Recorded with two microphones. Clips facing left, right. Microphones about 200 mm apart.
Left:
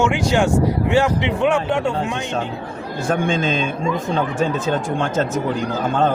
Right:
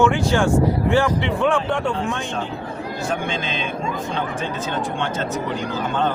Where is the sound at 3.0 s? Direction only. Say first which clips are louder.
Left 7 dB; 45° left (ahead or behind).